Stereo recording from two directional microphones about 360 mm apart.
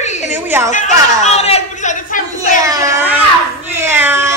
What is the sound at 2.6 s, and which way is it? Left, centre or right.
A woman's voice, centre.